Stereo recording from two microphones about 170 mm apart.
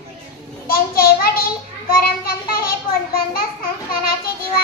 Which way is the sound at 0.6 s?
60° left (ahead or behind).